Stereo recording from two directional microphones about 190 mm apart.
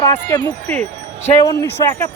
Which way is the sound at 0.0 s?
20° left (ahead or behind).